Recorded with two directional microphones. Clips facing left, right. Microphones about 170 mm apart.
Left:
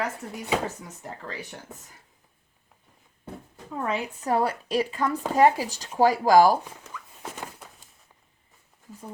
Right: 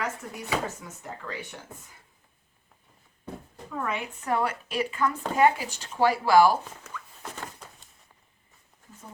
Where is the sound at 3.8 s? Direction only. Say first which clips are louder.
Left 3 dB; 35° left (ahead or behind).